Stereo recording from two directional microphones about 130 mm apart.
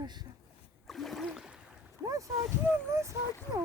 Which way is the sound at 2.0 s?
25° right (ahead or behind).